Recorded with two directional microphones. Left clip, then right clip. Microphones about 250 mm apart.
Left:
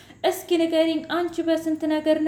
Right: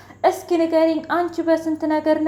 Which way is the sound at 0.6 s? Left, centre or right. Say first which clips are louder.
Right 5 dB; centre.